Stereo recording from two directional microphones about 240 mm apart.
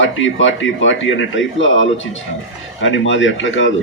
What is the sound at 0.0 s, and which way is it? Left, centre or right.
A man's voice, left.